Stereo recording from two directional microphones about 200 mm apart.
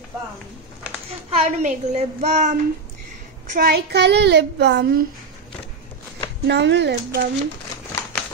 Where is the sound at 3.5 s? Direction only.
45° right (ahead or behind).